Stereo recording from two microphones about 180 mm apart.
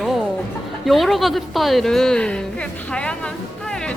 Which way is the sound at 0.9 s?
Centre (ahead or behind).